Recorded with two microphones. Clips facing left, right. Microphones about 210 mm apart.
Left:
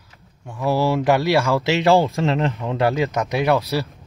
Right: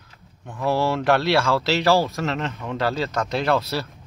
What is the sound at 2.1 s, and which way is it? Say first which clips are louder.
Speech: left 5 dB; 30° left (ahead or behind).